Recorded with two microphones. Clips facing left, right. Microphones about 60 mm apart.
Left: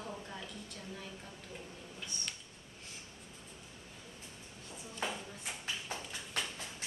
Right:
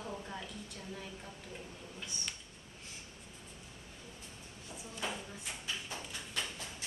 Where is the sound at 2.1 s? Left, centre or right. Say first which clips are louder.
Even; centre.